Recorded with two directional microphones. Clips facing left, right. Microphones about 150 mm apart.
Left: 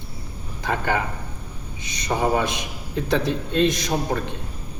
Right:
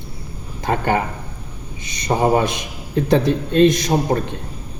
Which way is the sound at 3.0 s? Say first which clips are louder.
Right 6 dB; 50° right (ahead or behind).